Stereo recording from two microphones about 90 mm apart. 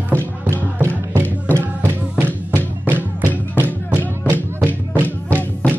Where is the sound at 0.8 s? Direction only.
25° right (ahead or behind).